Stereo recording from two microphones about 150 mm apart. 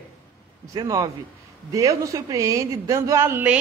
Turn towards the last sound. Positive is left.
turn(degrees=-15)  # may be behind; listen again after turning